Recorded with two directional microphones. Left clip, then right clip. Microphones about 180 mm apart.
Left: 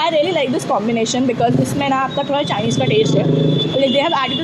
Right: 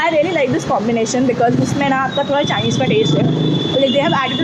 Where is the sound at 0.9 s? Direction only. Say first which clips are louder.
Right 2 dB; 20° left (ahead or behind).